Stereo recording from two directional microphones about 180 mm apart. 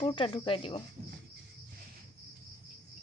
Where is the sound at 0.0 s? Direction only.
30° left (ahead or behind).